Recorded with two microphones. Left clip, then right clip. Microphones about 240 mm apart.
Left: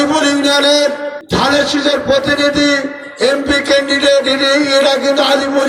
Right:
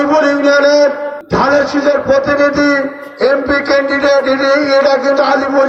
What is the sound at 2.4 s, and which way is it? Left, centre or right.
Speech, left.